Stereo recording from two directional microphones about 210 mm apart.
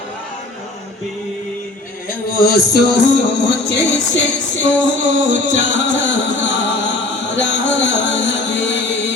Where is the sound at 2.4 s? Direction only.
50° left (ahead or behind).